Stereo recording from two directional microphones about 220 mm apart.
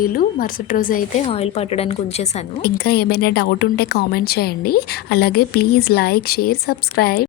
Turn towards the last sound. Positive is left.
turn(degrees=45)  # may be behind; listen again after turning